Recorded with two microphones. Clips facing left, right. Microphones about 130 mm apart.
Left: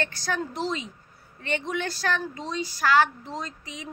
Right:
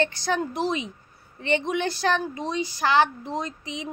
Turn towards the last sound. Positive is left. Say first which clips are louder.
# right 5 dB
turn(degrees=-20)  # may be behind; listen again after turning